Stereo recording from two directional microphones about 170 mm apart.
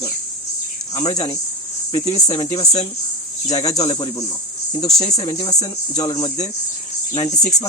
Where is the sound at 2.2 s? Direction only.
25° left (ahead or behind).